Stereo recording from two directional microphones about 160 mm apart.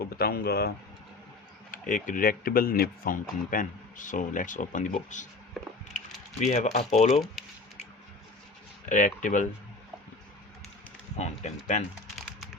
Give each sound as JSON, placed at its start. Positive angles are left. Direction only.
{"t": 0.0, "sound": "speech", "side_deg": 75}
{"t": 1.7, "sound": "speech", "side_deg": 55}
{"t": 6.4, "sound": "speech", "side_deg": 50}
{"t": 7.4, "sound": "squish", "side_deg": 0}
{"t": 8.9, "sound": "speech", "side_deg": 55}
{"t": 11.2, "sound": "speech", "side_deg": 45}
{"t": 12.1, "sound": "a sound", "side_deg": 0}